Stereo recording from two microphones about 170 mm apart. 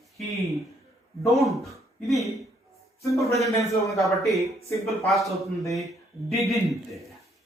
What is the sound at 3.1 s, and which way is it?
Speech, 20° left (ahead or behind).